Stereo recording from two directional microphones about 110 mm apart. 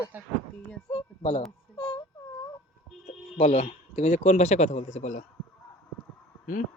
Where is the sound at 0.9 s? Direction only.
65° left (ahead or behind).